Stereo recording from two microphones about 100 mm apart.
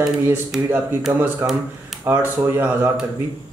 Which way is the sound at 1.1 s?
25° right (ahead or behind).